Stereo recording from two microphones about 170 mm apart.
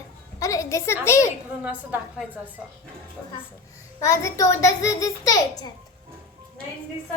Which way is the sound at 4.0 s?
15° left (ahead or behind).